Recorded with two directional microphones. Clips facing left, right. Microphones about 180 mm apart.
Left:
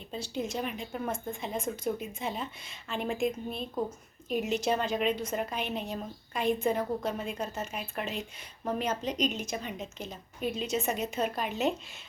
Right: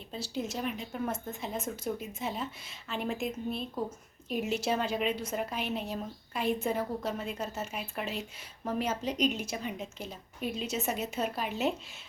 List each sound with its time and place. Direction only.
0.1 s a woman's voice: 5° right (ahead or behind)